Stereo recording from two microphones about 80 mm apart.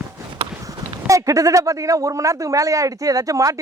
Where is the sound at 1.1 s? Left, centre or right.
Right.